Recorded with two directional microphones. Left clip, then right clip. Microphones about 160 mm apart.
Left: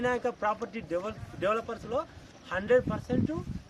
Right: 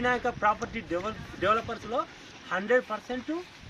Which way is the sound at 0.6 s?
30° left (ahead or behind).